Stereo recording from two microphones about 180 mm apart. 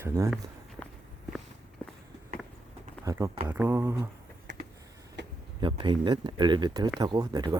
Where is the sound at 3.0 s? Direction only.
20° right (ahead or behind).